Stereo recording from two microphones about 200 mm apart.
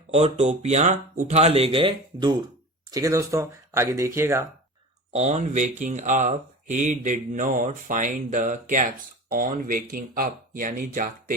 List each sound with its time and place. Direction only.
0.1 s speech: 30° right (ahead or behind); by 4.4 s 15° right (ahead or behind)
5.1 s speech: 35° right (ahead or behind)